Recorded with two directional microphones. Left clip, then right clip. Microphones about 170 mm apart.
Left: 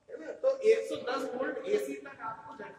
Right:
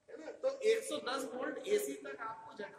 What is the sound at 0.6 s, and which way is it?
A woman's voice, 40° right (ahead or behind).